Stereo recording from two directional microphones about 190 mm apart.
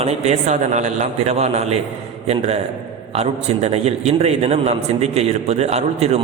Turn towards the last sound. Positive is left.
turn(degrees=-35)  # may be behind; listen again after turning